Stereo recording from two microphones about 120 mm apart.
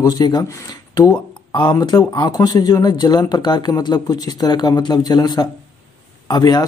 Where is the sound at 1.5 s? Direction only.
40° left (ahead or behind).